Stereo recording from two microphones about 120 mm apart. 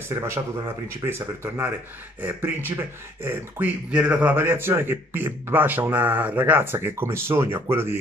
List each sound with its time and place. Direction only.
0.1 s speech: 25° right (ahead or behind)